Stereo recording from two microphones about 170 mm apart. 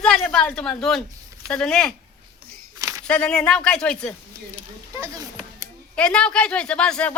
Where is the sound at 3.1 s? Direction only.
5° left (ahead or behind).